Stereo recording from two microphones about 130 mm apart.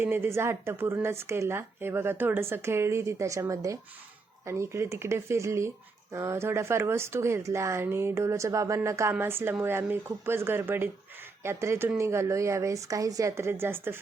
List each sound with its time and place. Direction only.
0.0 s speech: 15° right (ahead or behind)